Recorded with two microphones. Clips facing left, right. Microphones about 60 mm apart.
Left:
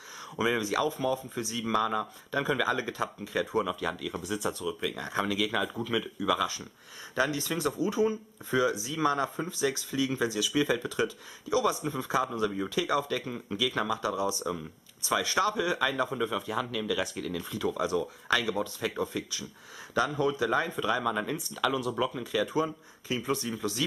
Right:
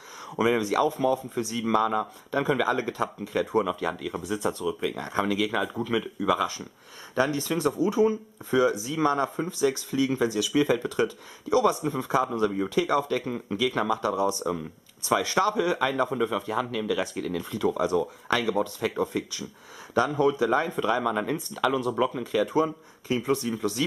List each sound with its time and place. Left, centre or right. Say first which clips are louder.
0.4 s speech: right 5 dB; right
1.0 s speech: right 5 dB; centre
3.8 s speech: right 3 dB; centre
5.1 s speech: right 3 dB; centre
7.2 s speech: right 4 dB; right
9.9 s speech: right 4 dB; right
13.2 s speech: right 5 dB; centre
14.0 s speech: right 4 dB; right
16.1 s speech: right 4 dB; centre
17.5 s speech: right 5 dB; right
21.5 s speech: right 4 dB; centre; by 23.4 s right